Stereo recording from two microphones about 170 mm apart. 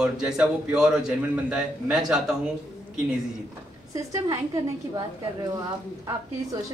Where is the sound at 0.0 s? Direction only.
5° right (ahead or behind).